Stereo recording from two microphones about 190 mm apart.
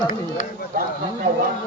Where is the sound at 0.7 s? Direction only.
50° right (ahead or behind).